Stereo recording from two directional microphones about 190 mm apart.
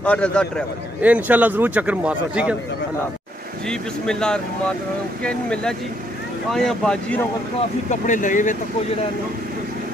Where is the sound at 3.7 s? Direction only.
5° left (ahead or behind).